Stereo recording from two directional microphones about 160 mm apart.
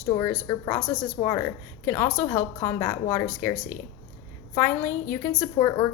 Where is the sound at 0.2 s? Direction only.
25° left (ahead or behind).